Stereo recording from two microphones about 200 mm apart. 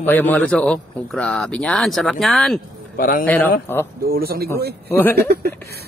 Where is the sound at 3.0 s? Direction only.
45° left (ahead or behind).